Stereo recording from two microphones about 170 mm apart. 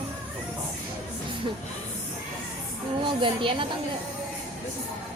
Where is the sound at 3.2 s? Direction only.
30° right (ahead or behind).